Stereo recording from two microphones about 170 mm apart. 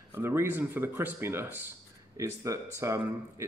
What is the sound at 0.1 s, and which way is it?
Speech, 15° right (ahead or behind).